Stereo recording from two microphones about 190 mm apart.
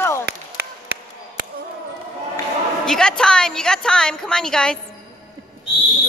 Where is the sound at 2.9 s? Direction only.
5° left (ahead or behind).